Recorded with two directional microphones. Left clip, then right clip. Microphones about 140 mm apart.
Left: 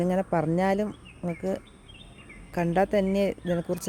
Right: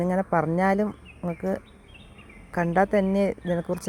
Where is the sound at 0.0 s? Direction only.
5° left (ahead or behind).